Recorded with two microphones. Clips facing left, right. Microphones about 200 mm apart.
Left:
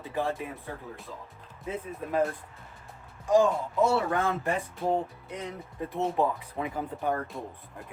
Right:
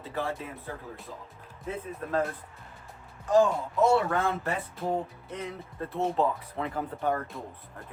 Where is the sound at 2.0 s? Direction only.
10° left (ahead or behind).